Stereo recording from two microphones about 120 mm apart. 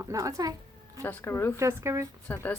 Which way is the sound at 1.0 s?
20° left (ahead or behind).